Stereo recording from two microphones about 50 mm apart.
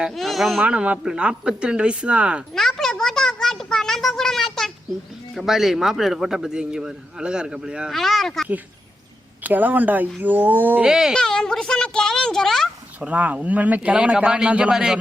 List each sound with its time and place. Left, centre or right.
0.1 s speech: centre
0.6 s speech: right
2.6 s a sound: centre
5.3 s speech: centre
7.9 s speech: centre
9.4 s speech: right
10.8 s speech: centre
11.1 s speech: centre
13.0 s speech: right